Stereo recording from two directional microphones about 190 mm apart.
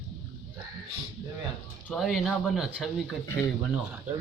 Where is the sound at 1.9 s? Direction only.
Centre (ahead or behind).